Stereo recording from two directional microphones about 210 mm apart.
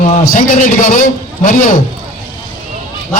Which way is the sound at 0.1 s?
40° left (ahead or behind).